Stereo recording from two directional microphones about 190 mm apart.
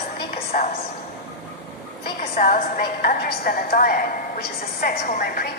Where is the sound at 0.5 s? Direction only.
40° left (ahead or behind).